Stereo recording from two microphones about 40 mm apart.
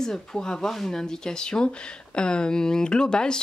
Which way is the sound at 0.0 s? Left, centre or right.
Centre.